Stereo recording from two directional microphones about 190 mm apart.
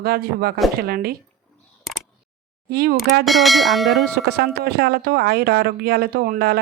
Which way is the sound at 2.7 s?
55° right (ahead or behind).